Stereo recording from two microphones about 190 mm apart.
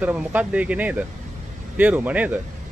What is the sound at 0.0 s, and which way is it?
Speech, 10° right (ahead or behind).